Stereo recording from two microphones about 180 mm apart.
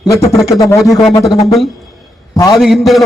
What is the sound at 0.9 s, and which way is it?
Speech, centre (ahead or behind).